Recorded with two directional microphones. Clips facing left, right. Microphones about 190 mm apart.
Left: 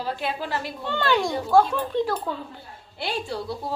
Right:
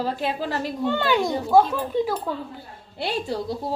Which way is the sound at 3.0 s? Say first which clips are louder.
Right 3 dB; 40° right (ahead or behind).